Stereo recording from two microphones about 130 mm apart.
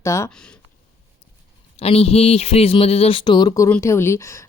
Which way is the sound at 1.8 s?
50° left (ahead or behind).